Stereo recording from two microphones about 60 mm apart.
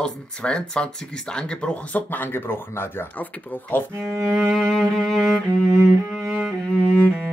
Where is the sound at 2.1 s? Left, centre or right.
Left.